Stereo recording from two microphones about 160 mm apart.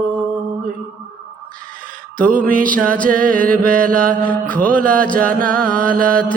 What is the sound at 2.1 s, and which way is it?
Music, 60° right (ahead or behind).